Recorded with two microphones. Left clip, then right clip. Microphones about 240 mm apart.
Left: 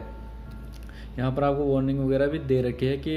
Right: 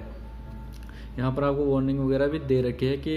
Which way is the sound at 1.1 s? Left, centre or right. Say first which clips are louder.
Left 1 dB; centre.